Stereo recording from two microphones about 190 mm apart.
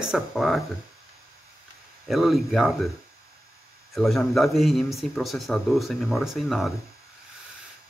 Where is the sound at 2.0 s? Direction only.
Centre (ahead or behind).